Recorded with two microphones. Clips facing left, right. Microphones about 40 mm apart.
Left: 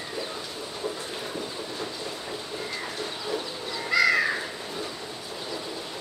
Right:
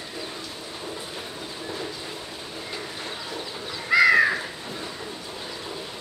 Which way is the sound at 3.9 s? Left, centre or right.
Centre.